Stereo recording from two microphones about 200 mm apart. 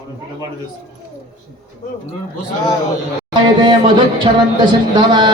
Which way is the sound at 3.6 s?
25° right (ahead or behind).